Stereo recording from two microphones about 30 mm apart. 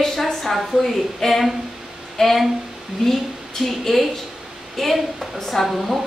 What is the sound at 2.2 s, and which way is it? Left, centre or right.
Speech, centre.